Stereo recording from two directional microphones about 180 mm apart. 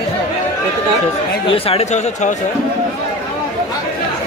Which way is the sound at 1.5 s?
30° left (ahead or behind).